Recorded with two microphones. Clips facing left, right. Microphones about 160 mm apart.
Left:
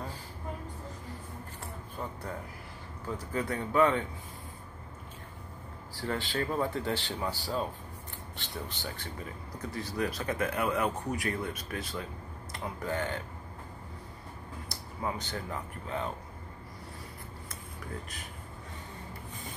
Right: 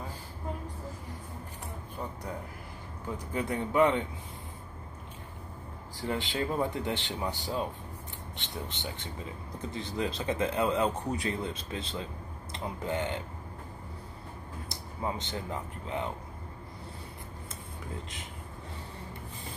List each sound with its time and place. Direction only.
3.3 s speech: 20° right (ahead or behind)
5.9 s speech: 20° right (ahead or behind)
14.7 s speech: 20° right (ahead or behind)